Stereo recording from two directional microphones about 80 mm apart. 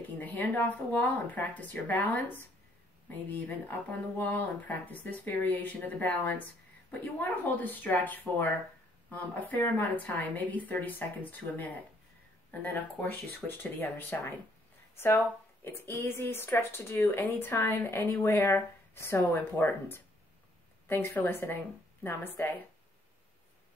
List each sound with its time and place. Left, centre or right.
0.2 s a woman's voice: left